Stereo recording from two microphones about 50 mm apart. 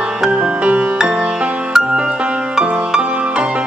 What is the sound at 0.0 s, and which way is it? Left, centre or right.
Music, centre.